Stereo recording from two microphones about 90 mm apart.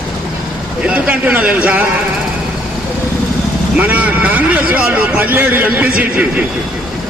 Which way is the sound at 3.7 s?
15° right (ahead or behind).